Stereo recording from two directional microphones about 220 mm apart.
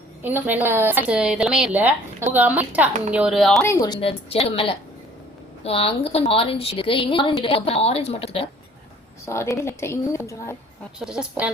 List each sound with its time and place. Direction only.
0.2 s speech: 10° right (ahead or behind)
3.6 s a woman's voice: 15° left (ahead or behind)
9.2 s a woman's voice: 10° left (ahead or behind)
11.0 s speech: 5° right (ahead or behind)